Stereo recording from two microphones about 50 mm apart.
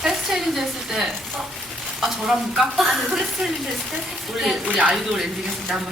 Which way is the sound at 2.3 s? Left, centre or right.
Centre.